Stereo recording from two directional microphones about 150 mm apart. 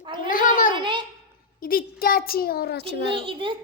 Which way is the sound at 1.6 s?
80° left.